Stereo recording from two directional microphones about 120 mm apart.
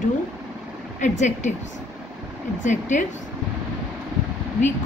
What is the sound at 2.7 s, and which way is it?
Speech, 90° left.